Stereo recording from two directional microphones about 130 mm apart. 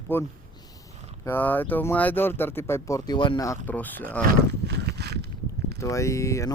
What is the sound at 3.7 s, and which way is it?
Speech, 15° left (ahead or behind).